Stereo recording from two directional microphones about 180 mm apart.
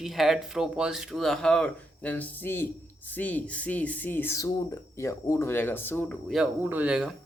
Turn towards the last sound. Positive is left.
turn(degrees=-5)  # may be behind; listen again after turning